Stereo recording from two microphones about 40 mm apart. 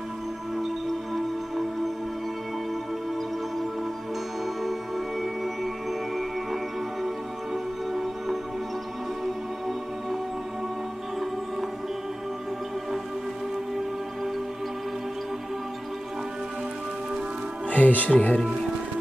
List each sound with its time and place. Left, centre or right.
0.6 s music: centre
4.6 s music: centre
17.6 s speech: left